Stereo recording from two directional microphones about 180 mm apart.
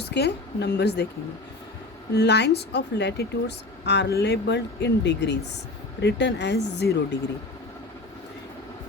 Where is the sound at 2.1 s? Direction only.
70° left (ahead or behind).